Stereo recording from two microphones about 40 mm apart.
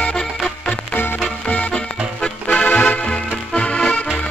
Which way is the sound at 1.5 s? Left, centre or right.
Left.